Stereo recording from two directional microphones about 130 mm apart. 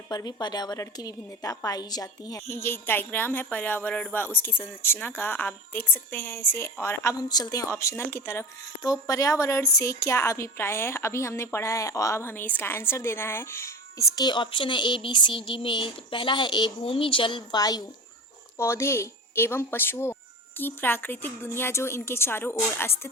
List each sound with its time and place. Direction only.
0.1 s a woman's voice: 30° left (ahead or behind)
14.3 s a woman's voice: 40° left (ahead or behind); by 23.0 s 15° left (ahead or behind)